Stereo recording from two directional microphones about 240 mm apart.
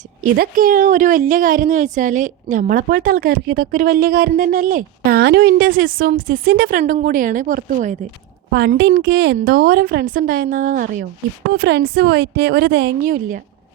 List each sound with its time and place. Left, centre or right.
0.2 s a woman's voice: right